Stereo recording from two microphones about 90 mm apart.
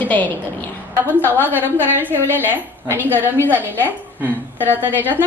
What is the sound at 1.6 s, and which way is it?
Speech, 20° left (ahead or behind).